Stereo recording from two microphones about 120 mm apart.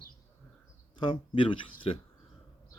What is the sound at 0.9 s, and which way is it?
Speech, 45° left (ahead or behind).